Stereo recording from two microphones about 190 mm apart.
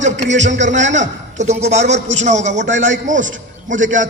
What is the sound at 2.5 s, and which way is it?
Speech, 70° right (ahead or behind).